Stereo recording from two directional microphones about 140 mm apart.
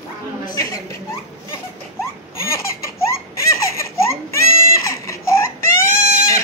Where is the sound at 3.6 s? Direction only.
20° left (ahead or behind).